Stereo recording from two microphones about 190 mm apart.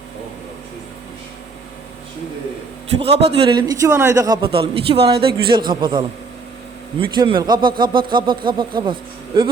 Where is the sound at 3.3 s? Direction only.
25° right (ahead or behind).